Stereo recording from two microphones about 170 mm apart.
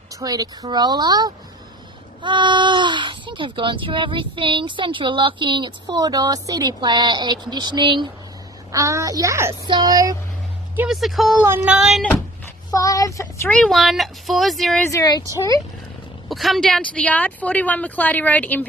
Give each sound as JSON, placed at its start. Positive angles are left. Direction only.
{"t": 0.1, "sound": "speech", "side_deg": -20}
{"t": 10.8, "sound": "speech", "side_deg": 0}
{"t": 12.7, "sound": "speech", "side_deg": 20}
{"t": 13.5, "sound": "speech", "side_deg": 5}
{"t": 14.8, "sound": "speech", "side_deg": 20}
{"t": 16.3, "sound": "speech", "side_deg": 0}